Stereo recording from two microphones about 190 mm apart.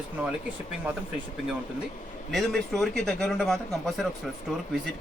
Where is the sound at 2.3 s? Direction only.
Centre (ahead or behind).